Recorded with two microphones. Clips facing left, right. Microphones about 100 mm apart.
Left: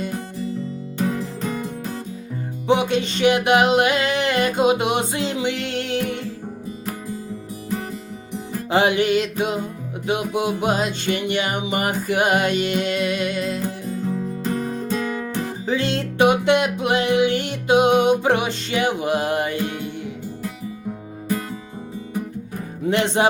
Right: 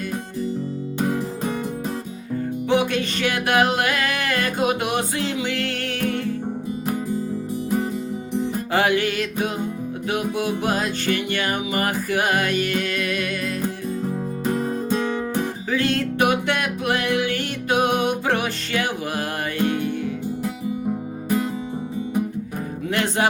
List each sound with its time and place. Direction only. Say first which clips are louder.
0.9 s music: even; 20° right (ahead or behind)
2.6 s music: left 3 dB; 20° left (ahead or behind)
8.7 s music: left 4 dB; 20° left (ahead or behind)
15.7 s music: right 1 dB; 20° left (ahead or behind)
22.9 s music: left 3 dB; 20° left (ahead or behind)